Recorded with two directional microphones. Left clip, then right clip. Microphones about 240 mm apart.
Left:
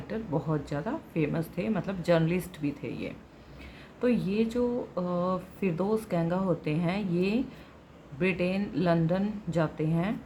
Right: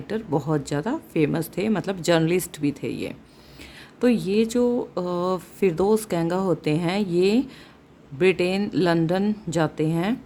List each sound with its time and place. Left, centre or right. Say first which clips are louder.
0.1 s speech: right 7 dB; right